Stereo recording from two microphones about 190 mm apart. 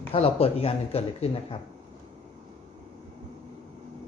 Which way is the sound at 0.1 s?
30° left (ahead or behind).